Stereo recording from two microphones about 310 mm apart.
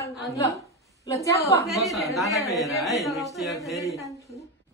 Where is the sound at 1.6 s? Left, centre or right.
Centre.